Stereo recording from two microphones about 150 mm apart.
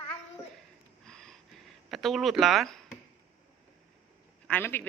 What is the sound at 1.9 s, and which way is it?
Speech, centre (ahead or behind).